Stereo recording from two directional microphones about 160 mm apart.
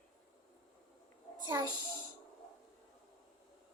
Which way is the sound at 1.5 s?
25° right (ahead or behind).